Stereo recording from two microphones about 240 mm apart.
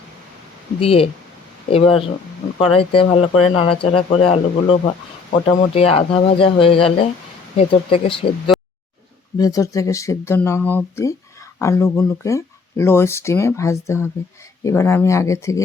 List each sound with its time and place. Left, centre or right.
0.8 s speech: left